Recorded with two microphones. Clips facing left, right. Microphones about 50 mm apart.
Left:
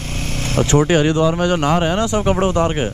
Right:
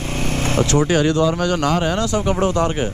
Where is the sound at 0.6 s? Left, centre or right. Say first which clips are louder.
Left 3 dB; left.